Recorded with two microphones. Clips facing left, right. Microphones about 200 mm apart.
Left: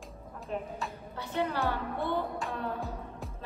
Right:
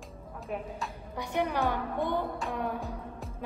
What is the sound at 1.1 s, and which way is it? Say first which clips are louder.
A woman's voice: right 2 dB; 15° right (ahead or behind).